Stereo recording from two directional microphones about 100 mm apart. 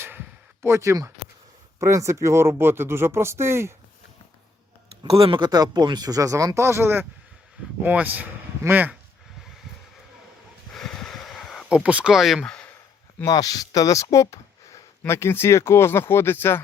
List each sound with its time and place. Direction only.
0.6 s speech: 30° right (ahead or behind)
5.0 s speech: 70° right (ahead or behind); by 8.9 s 20° right (ahead or behind)
10.7 s a sound: 5° left (ahead or behind)
11.7 s speech: 10° right (ahead or behind)
13.2 s speech: 40° left (ahead or behind); by 16.6 s 25° left (ahead or behind)